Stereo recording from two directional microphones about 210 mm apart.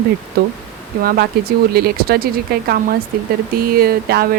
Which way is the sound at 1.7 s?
45° right (ahead or behind).